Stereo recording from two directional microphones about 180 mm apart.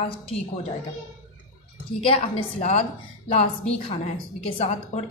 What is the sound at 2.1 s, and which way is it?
A woman's voice, 35° left (ahead or behind).